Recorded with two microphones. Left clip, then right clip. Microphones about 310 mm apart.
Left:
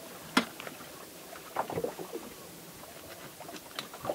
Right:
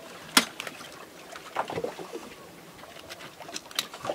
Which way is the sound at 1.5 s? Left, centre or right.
Centre.